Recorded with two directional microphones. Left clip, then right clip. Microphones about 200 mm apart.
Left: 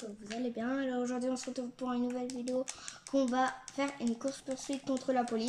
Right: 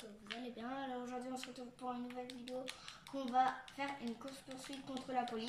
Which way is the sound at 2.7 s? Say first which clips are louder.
Left 11 dB; 50° left (ahead or behind).